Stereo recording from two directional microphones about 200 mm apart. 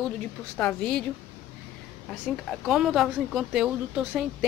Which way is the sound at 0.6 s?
5° left (ahead or behind).